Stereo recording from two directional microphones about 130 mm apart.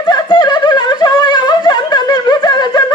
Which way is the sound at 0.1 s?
35° left (ahead or behind).